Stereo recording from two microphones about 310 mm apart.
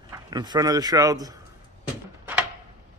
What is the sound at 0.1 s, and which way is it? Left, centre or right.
A man's voice, centre.